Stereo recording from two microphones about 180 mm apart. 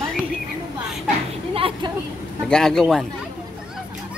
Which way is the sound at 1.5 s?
30° right (ahead or behind).